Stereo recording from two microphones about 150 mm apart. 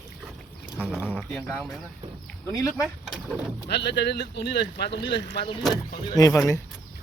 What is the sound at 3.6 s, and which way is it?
Speech, 90° left.